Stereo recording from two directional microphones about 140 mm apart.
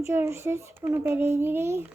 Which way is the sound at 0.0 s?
20° right (ahead or behind).